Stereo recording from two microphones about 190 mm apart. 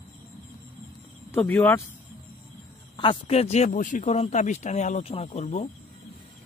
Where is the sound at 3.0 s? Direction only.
30° left (ahead or behind).